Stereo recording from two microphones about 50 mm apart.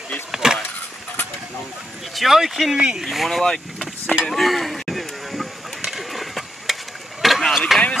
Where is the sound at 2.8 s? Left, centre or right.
Centre.